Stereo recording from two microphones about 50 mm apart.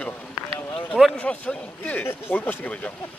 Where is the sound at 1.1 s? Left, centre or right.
Left.